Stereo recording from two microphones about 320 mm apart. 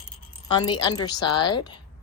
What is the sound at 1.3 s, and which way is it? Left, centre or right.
Speech, left.